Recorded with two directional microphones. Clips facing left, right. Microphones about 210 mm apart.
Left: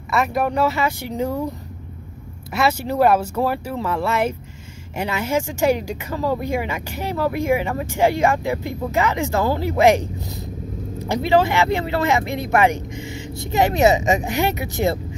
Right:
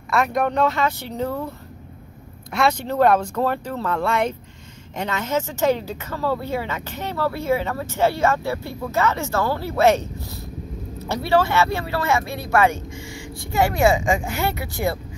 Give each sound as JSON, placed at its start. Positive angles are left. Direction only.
{"t": 0.1, "sound": "speech", "side_deg": 5}
{"t": 2.5, "sound": "speech", "side_deg": 5}